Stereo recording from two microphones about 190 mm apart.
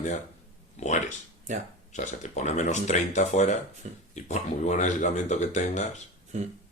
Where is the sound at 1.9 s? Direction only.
40° left (ahead or behind).